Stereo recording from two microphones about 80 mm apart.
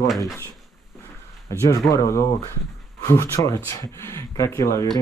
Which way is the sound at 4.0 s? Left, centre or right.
Left.